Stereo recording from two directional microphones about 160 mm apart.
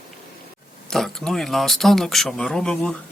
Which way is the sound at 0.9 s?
Centre (ahead or behind).